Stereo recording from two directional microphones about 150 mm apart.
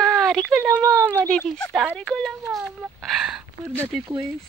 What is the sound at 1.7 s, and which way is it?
Speech, 10° right (ahead or behind).